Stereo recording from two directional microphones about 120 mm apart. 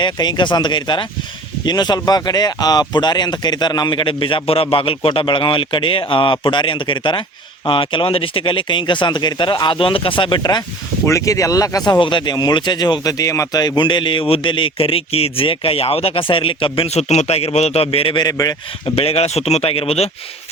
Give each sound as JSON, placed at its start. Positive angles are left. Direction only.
{"t": 0.0, "sound": "speech", "side_deg": 40}
{"t": 11.0, "sound": "speech", "side_deg": 25}
{"t": 11.9, "sound": "speech", "side_deg": 40}
{"t": 18.2, "sound": "speech", "side_deg": 30}
{"t": 18.9, "sound": "speech", "side_deg": 55}